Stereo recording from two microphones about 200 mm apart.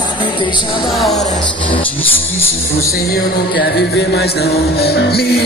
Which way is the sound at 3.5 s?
55° left (ahead or behind).